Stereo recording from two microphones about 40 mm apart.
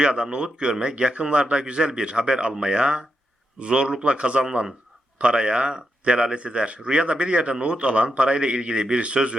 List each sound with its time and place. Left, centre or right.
0.0 s speech: right